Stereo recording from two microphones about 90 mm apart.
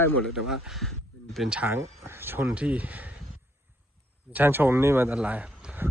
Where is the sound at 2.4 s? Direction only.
15° right (ahead or behind).